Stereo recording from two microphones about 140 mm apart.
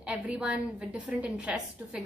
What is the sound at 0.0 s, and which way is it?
A woman's voice, 10° right (ahead or behind).